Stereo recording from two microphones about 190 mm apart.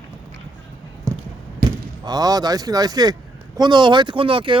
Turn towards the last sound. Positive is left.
turn(degrees=-25)  # may be behind; listen again after turning